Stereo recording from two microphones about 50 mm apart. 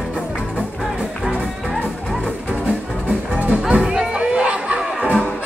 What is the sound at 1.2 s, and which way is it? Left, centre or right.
Music, centre.